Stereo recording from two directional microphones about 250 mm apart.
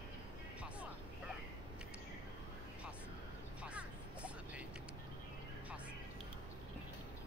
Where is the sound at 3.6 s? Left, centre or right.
Centre.